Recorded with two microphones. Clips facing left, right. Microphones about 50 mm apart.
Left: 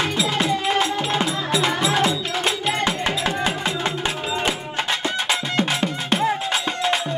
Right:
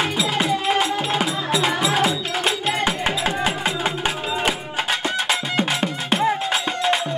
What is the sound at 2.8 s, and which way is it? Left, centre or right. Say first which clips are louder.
Music: right 1 dB; centre.